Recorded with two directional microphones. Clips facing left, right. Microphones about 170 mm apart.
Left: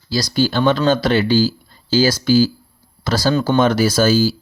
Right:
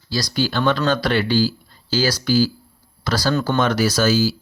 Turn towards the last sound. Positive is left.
turn(degrees=30)  # may be behind; listen again after turning